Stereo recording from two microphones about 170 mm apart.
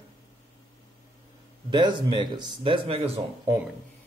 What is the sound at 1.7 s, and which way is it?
A man's voice, 25° right (ahead or behind).